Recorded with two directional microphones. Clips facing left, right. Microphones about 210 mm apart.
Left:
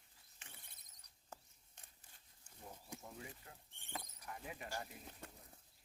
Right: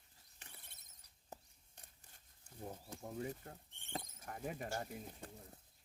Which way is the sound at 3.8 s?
25° right (ahead or behind).